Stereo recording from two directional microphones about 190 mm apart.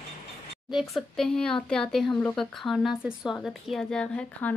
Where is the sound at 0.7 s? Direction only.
Centre (ahead or behind).